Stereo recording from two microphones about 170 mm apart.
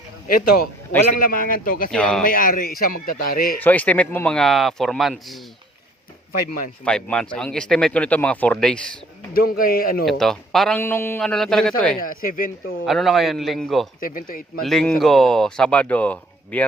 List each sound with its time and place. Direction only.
1.2 s a man's voice: 55° left (ahead or behind)
1.9 s speech: 5° left (ahead or behind)
2.2 s a man's voice: 55° left (ahead or behind)
3.6 s speech: 10° left (ahead or behind)
6.8 s speech: 5° left (ahead or behind)
9.3 s a man's voice: 60° left (ahead or behind)
10.1 s speech: centre (ahead or behind)
10.8 s speech: 15° left (ahead or behind)
12.0 s speech: 55° left (ahead or behind)
12.8 s speech: centre (ahead or behind)
14.0 s a man's voice: 55° left (ahead or behind)
14.6 s speech: centre (ahead or behind)